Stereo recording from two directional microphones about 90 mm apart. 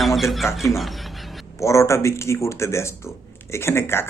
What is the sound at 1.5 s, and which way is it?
Speech, 35° left (ahead or behind).